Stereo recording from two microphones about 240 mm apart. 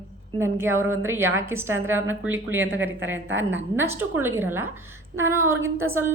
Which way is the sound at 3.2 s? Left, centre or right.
Right.